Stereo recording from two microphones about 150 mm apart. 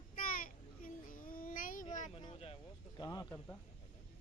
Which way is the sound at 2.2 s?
35° left (ahead or behind).